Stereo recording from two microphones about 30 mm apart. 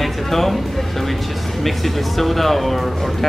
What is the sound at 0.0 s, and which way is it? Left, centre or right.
Music, centre.